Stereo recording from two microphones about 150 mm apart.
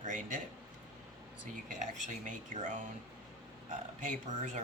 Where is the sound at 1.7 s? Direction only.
55° right (ahead or behind).